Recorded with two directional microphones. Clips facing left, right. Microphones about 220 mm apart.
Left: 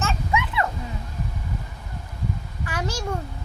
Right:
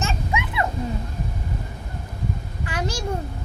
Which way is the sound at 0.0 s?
15° right (ahead or behind).